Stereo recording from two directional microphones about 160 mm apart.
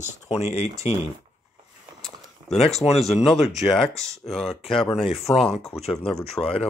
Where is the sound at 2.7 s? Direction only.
45° left (ahead or behind).